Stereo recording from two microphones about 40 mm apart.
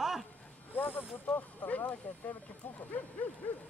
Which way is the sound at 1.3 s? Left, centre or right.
Left.